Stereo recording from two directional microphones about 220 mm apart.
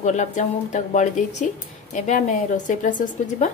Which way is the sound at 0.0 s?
35° left (ahead or behind).